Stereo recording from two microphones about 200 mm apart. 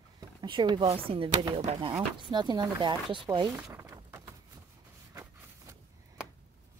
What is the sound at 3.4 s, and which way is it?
Speech, centre (ahead or behind).